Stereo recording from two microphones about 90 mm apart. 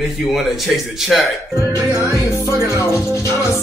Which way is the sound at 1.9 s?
35° left (ahead or behind).